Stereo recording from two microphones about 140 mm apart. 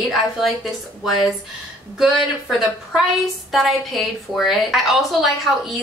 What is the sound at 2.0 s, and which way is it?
A woman's voice, 5° right (ahead or behind).